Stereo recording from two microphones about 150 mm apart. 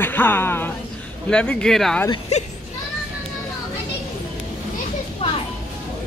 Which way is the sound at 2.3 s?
50° left (ahead or behind).